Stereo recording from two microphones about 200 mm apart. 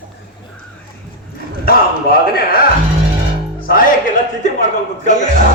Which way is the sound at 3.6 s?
45° left (ahead or behind).